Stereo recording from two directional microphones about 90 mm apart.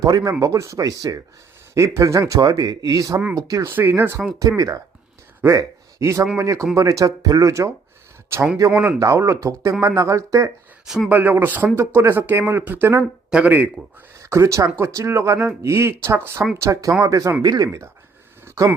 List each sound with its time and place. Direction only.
0.0 s speech: 40° right (ahead or behind)
3.7 s speech: 25° right (ahead or behind)
4.4 s speech: 40° right (ahead or behind)
11.1 s speech: 20° right (ahead or behind)
14.2 s speech: 30° right (ahead or behind)
17.4 s speech: 50° right (ahead or behind)
18.4 s a sound: 35° right (ahead or behind)